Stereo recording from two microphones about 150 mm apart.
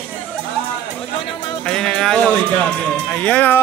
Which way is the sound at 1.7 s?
5° left (ahead or behind).